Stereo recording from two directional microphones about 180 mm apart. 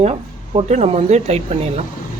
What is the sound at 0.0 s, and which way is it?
Speech, 35° right (ahead or behind).